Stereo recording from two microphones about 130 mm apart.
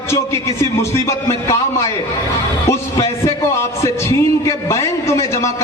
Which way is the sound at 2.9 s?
25° left (ahead or behind).